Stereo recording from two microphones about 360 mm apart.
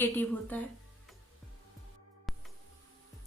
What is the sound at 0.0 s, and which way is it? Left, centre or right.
Speech, centre.